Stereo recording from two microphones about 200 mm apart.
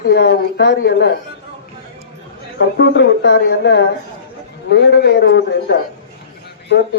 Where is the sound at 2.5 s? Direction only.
60° left (ahead or behind).